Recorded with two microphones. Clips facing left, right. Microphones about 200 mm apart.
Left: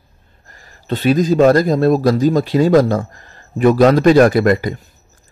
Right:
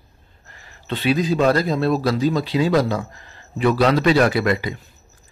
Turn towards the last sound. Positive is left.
turn(degrees=45)  # may be behind; listen again after turning